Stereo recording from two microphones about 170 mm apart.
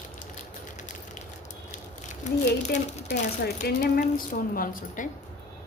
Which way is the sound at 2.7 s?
40° left (ahead or behind).